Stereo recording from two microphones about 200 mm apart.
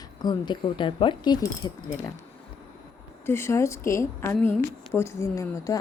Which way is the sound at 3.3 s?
10° left (ahead or behind).